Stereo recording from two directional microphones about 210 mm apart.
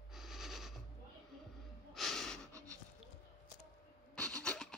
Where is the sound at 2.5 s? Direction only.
15° right (ahead or behind).